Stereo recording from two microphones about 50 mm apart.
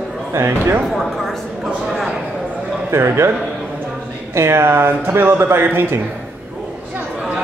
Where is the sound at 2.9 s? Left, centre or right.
Right.